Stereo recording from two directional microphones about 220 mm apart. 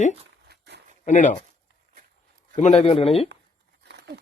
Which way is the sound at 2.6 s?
30° left (ahead or behind).